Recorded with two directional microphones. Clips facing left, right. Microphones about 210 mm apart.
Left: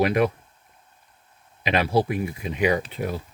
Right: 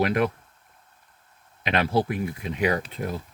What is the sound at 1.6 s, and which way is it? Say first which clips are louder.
Speech: left 2 dB; 5° left (ahead or behind).